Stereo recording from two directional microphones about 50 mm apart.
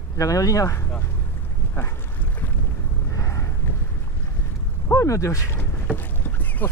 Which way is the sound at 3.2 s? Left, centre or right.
Left.